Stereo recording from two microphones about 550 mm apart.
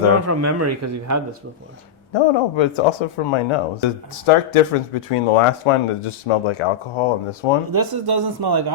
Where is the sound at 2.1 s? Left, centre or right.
Left.